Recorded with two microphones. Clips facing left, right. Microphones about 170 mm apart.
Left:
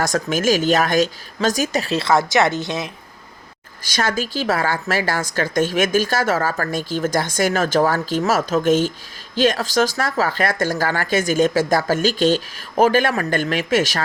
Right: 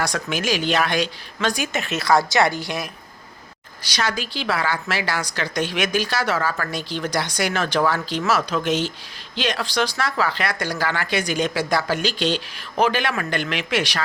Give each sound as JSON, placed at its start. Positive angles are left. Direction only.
{"t": 0.0, "sound": "speech", "side_deg": 45}
{"t": 3.8, "sound": "a woman's voice", "side_deg": 50}